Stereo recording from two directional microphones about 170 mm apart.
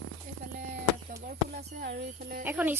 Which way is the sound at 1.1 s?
70° right (ahead or behind).